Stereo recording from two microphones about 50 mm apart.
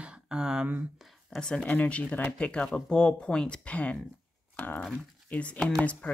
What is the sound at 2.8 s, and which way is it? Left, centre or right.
Speech, left.